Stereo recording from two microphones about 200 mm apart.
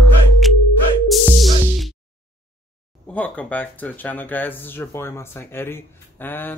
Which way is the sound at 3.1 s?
5° left (ahead or behind).